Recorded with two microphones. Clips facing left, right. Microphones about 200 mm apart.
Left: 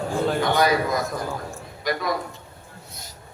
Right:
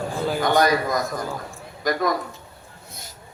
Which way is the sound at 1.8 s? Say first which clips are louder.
Right 3 dB; 45° right (ahead or behind).